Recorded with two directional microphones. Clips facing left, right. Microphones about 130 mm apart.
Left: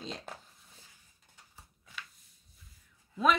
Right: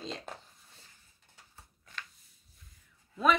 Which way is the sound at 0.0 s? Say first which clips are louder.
Right 1 dB; centre (ahead or behind).